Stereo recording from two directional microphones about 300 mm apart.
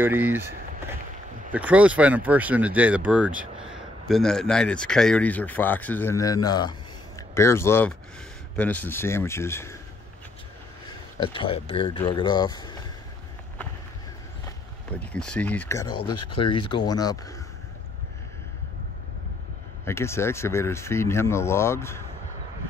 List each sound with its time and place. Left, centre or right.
0.0 s speech: centre
11.3 s speech: centre
14.4 s speech: centre
19.8 s speech: centre